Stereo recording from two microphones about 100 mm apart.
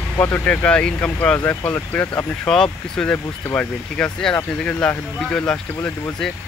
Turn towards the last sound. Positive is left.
turn(degrees=10)  # may be behind; listen again after turning